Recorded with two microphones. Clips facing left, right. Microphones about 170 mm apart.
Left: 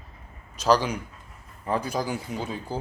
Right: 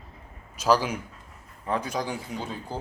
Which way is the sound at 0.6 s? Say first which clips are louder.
Left 1 dB; 5° right (ahead or behind).